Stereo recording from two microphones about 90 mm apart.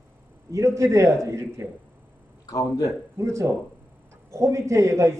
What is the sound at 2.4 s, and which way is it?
Speech, 40° left (ahead or behind).